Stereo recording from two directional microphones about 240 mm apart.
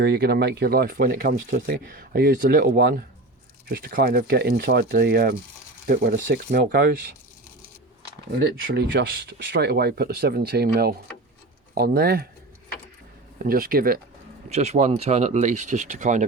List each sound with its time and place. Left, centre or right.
0.0 s speech: right
8.3 s speech: right
13.4 s speech: right